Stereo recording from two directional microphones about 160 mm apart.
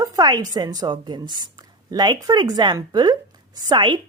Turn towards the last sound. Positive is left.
turn(degrees=-30)  # may be behind; listen again after turning